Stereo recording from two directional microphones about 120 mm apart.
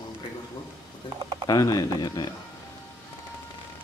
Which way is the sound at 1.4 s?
30° left (ahead or behind).